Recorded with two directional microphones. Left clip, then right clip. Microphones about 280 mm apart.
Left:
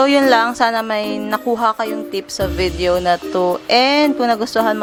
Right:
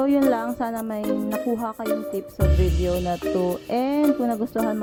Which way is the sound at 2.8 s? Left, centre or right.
Centre.